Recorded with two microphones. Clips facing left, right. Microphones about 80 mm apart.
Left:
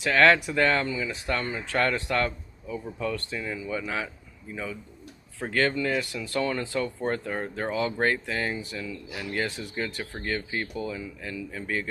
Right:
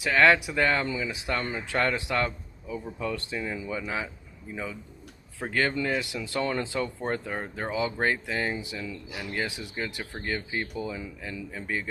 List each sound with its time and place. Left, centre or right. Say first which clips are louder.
0.0 s speech: left 1 dB; centre
5.4 s speech: left 2 dB; centre